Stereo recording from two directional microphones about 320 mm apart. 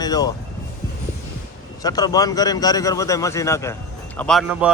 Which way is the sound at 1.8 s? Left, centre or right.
Centre.